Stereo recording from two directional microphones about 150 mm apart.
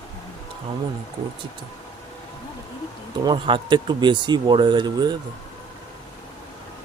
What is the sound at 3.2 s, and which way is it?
Speech, 30° right (ahead or behind).